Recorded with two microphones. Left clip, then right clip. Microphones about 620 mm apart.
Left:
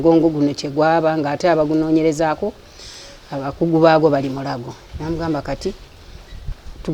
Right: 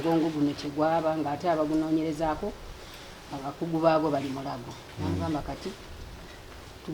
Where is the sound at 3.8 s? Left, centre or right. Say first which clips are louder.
Left 11 dB; left.